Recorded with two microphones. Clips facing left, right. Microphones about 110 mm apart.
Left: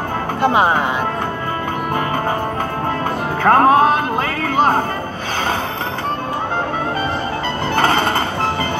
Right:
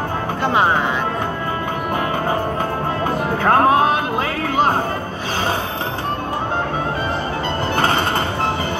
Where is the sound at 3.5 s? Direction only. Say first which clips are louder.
Left 3 dB; 35° left (ahead or behind).